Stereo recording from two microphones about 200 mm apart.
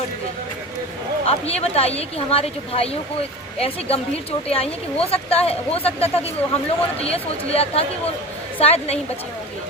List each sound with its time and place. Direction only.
1.2 s a woman's voice: 30° left (ahead or behind)